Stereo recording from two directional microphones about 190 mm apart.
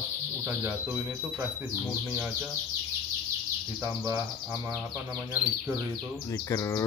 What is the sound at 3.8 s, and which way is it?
Speech, 15° right (ahead or behind).